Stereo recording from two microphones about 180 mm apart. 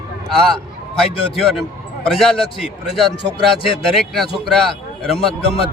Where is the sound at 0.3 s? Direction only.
5° left (ahead or behind).